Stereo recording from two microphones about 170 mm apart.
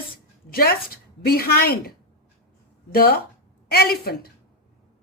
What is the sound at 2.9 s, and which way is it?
Speech, 65° left (ahead or behind).